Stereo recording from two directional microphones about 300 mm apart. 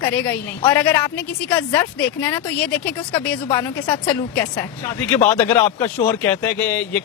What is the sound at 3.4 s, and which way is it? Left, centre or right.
Speech, centre.